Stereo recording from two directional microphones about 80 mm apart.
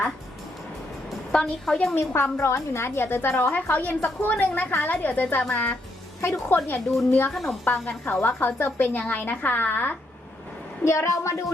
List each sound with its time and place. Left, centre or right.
1.3 s a woman's voice: centre
2.0 s a woman's voice: left
7.3 s a woman's voice: centre
7.6 s a woman's voice: left
10.8 s a woman's voice: left